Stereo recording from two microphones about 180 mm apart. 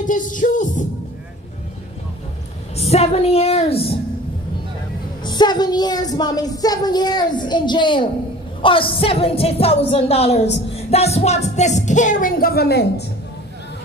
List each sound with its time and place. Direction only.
0.0 s music: 45° left (ahead or behind)
2.7 s music: 35° left (ahead or behind)
5.2 s a woman's voice: 25° left (ahead or behind)
8.6 s music: 30° left (ahead or behind); by 13.0 s 65° left (ahead or behind)